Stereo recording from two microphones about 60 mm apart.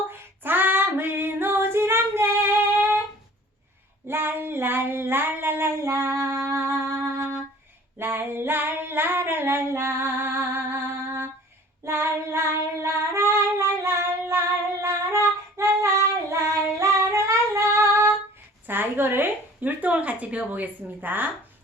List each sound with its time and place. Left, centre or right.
0.1 s female singing: right
4.1 s female singing: right
11.9 s child singing: right
13.8 s female singing: right
18.6 s a sound: right
19.8 s a woman's voice: right